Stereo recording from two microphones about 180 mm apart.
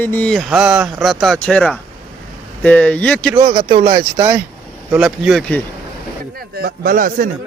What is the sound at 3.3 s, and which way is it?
Speech, 25° right (ahead or behind).